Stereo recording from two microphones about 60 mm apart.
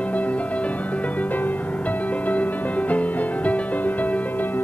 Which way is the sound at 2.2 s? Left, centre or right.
Left.